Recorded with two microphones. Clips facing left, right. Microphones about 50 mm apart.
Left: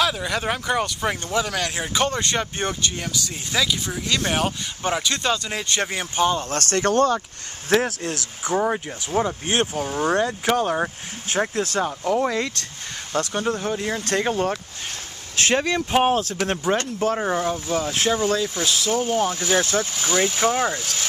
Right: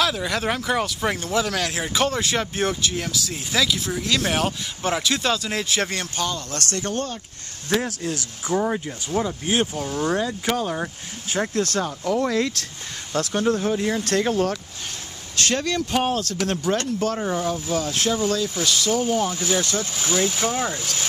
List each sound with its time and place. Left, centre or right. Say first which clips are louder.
0.0 s speech: even; centre
6.1 s speech: left 10 dB; left
6.8 s speech: left 10 dB; left
8.5 s speech: left 1 dB; centre
10.6 s speech: left 4 dB; left
11.3 s speech: left 1 dB; centre
12.4 s speech: right 2 dB; centre